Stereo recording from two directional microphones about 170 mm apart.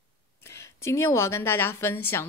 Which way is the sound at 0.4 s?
15° left (ahead or behind).